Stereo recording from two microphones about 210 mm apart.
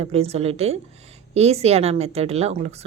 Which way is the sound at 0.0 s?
30° right (ahead or behind).